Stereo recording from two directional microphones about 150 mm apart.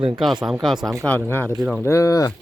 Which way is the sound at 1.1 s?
10° left (ahead or behind).